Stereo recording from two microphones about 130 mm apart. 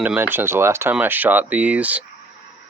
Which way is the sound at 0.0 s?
15° right (ahead or behind).